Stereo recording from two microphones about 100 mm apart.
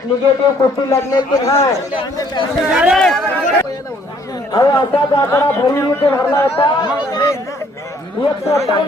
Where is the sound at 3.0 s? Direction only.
5° left (ahead or behind).